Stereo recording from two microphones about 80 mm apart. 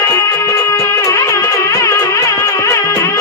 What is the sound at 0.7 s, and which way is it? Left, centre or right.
Music, left.